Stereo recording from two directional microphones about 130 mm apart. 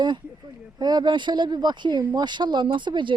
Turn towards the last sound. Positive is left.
turn(degrees=-35)  # may be behind; listen again after turning